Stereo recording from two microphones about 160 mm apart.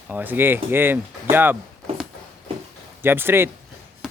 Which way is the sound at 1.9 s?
40° right (ahead or behind).